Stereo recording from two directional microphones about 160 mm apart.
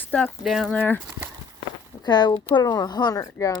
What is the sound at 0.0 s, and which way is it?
Speech, 10° left (ahead or behind).